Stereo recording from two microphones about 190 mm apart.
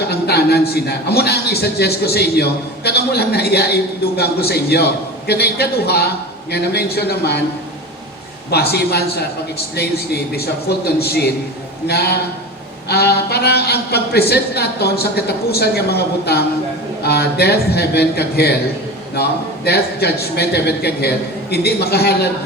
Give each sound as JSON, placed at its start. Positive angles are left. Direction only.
{"t": 0.0, "sound": "a man's voice", "side_deg": 60}
{"t": 8.7, "sound": "a man's voice", "side_deg": 60}